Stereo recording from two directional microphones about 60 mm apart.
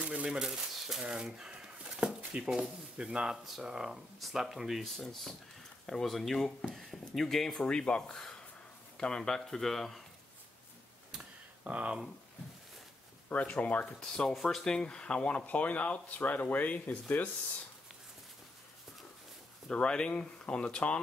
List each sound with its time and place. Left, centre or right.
0.0 s speech: centre
11.6 s speech: right
13.3 s speech: left
13.9 s speech: centre
19.7 s speech: centre